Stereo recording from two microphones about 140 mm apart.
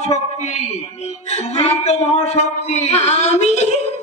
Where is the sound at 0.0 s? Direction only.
55° left (ahead or behind).